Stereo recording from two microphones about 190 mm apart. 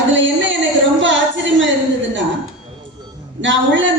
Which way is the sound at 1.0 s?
75° right (ahead or behind).